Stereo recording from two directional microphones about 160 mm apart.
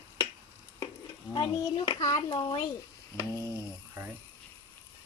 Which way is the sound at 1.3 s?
25° left (ahead or behind).